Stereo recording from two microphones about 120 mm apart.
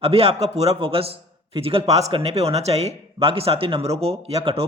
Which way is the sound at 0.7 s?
50° right (ahead or behind).